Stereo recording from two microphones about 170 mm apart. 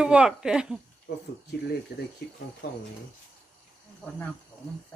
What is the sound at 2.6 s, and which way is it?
Speech, 70° left (ahead or behind).